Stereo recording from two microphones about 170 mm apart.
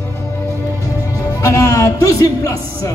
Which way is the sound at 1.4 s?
15° left (ahead or behind).